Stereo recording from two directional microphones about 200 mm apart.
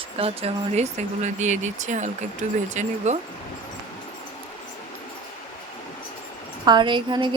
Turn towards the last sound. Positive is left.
turn(degrees=-25)  # may be behind; listen again after turning